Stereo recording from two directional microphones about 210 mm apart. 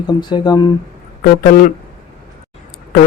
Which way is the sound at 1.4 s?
45° left (ahead or behind).